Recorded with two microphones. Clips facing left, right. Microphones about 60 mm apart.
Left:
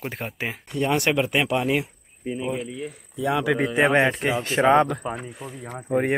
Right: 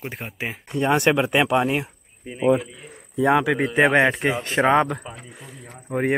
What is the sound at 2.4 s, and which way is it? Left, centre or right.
Speech, right.